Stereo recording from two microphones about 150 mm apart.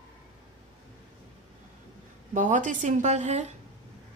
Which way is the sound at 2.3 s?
55° right (ahead or behind).